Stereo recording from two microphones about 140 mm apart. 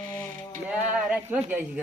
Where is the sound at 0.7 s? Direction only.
10° right (ahead or behind).